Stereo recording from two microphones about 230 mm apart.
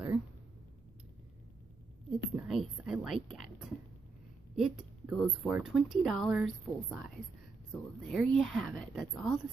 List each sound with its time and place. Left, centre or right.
2.0 s a sound: centre
4.6 s speech: centre
8.1 s speech: centre